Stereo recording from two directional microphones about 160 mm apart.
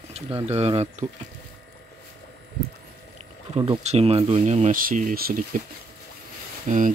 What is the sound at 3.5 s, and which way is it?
Speech, 35° right (ahead or behind).